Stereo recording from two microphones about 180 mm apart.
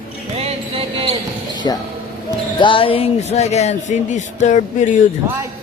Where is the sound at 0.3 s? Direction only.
35° right (ahead or behind).